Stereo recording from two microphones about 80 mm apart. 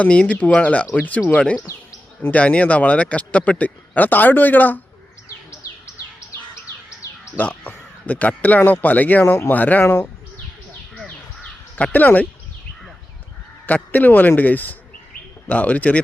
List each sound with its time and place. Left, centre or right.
0.0 s speech: centre
5.5 s bird: left
7.3 s speech: left
11.8 s speech: left
13.7 s speech: left